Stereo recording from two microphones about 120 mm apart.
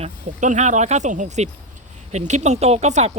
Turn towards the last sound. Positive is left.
turn(degrees=-65)  # may be behind; listen again after turning